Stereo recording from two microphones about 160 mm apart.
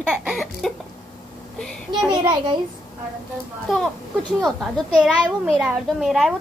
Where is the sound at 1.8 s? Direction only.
30° right (ahead or behind).